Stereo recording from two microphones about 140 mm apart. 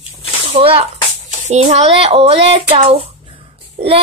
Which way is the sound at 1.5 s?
50° right (ahead or behind).